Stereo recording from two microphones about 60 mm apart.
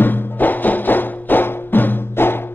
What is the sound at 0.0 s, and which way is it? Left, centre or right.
Music, left.